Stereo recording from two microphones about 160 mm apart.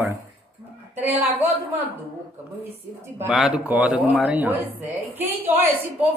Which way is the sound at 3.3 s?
5° right (ahead or behind).